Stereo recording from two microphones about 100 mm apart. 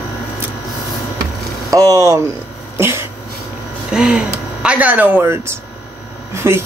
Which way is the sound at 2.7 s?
25° right (ahead or behind).